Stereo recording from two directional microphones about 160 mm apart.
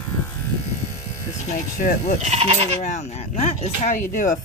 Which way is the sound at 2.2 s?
40° right (ahead or behind).